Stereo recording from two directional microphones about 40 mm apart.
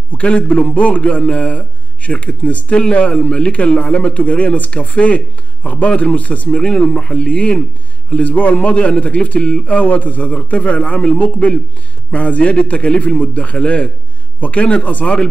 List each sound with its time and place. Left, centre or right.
0.1 s a man's voice: left